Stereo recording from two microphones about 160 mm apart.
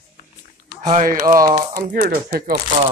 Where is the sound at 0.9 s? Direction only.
50° right (ahead or behind).